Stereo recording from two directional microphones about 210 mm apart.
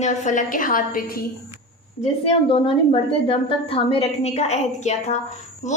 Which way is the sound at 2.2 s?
25° left (ahead or behind).